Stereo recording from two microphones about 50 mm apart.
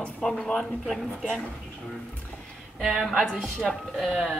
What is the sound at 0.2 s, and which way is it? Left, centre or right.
Speech, centre.